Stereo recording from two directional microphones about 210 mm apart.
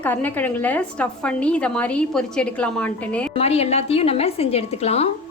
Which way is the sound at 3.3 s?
30° left (ahead or behind).